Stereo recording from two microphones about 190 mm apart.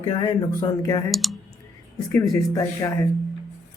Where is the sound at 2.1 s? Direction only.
15° left (ahead or behind).